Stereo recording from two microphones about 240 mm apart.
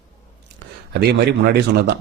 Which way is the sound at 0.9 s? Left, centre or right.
Right.